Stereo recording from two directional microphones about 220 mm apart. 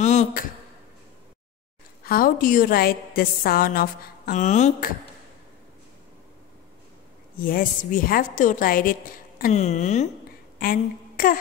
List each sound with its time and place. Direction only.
0.0 s a sound: 30° left (ahead or behind)
2.0 s a woman's voice: 40° left (ahead or behind)
7.3 s a woman's voice: 40° left (ahead or behind)